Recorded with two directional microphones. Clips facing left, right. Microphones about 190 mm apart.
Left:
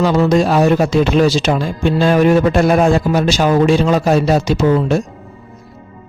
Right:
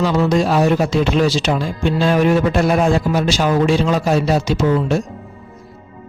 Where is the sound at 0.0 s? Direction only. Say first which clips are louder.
Left 3 dB; 50° left (ahead or behind).